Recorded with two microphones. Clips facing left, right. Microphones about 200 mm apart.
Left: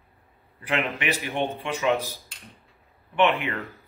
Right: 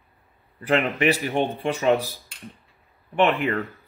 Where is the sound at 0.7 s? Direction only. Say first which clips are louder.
Right 6 dB; 35° right (ahead or behind).